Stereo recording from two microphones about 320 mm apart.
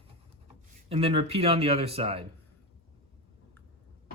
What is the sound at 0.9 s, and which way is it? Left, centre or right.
Speech, centre.